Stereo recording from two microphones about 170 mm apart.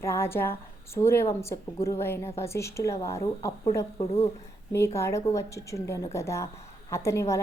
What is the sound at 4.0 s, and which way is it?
Speech, 35° left (ahead or behind).